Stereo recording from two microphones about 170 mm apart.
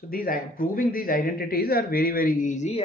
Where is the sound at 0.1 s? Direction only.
60° left (ahead or behind).